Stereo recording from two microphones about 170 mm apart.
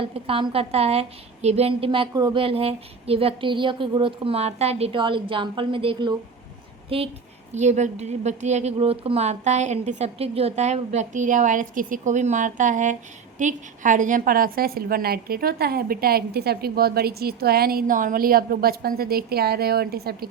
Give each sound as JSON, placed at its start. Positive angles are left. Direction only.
{"t": 0.0, "sound": "a woman's voice", "side_deg": -35}